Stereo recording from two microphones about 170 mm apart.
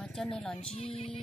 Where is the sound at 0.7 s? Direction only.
35° left (ahead or behind).